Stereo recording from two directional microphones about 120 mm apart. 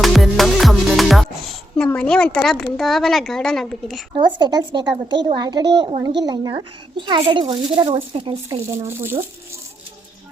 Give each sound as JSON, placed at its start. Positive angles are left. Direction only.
{"t": 0.0, "sound": "music", "side_deg": 0}
{"t": 1.7, "sound": "a woman's voice", "side_deg": 10}
{"t": 4.4, "sound": "a woman's voice", "side_deg": -35}
{"t": 8.7, "sound": "speech", "side_deg": -20}